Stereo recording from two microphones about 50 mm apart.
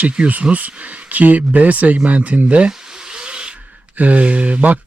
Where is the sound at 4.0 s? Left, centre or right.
Right.